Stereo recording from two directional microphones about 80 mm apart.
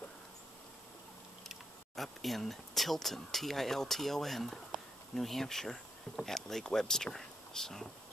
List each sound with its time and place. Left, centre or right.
1.5 s speech: centre